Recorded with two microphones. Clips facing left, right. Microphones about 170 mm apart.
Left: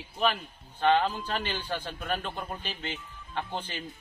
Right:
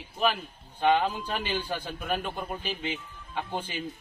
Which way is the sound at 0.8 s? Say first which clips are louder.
Even; 10° right (ahead or behind).